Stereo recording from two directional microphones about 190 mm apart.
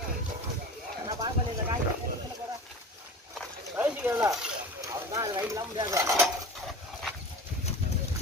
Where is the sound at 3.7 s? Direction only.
10° right (ahead or behind).